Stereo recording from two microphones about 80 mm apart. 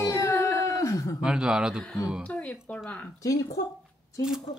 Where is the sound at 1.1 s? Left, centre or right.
Centre.